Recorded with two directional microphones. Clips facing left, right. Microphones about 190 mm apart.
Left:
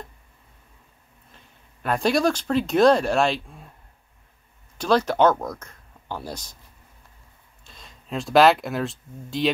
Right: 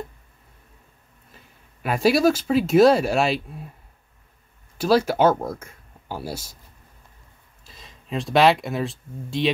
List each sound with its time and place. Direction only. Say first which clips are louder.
1.3 s speech: right 2 dB; 5° right (ahead or behind)
4.7 s speech: right 1 dB; 5° right (ahead or behind)
5.3 s speech: right 2 dB; 25° right (ahead or behind)
5.6 s a sound: right 2 dB; 5° right (ahead or behind)
6.2 s speech: right 3 dB; 5° right (ahead or behind)
7.6 s speech: right 1 dB; centre (ahead or behind)